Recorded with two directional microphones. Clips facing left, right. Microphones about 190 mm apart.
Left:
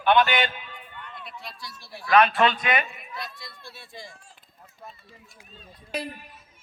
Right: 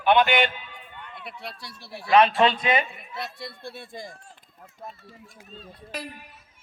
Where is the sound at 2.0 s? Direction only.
30° right (ahead or behind).